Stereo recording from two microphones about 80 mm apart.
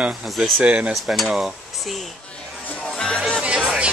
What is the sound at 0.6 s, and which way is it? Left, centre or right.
Speech, centre.